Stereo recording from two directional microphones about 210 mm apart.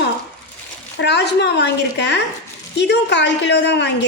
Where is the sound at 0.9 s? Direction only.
55° left (ahead or behind).